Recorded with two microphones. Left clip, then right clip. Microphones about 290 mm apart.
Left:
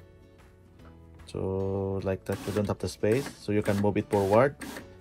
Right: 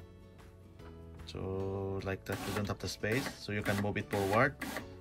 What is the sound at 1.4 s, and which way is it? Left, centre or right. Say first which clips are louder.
Speech: left 8 dB; left.